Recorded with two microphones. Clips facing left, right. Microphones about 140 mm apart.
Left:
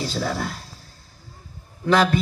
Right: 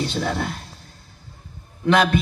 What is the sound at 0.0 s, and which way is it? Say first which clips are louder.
Speech: right 2 dB; 35° left (ahead or behind).